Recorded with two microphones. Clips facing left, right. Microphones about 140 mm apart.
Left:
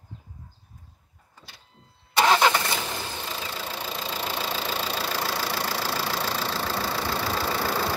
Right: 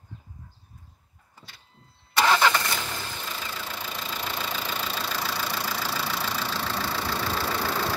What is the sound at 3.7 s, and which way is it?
Engine, 25° left (ahead or behind).